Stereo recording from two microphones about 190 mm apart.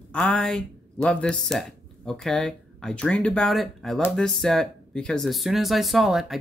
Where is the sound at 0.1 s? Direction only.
5° left (ahead or behind).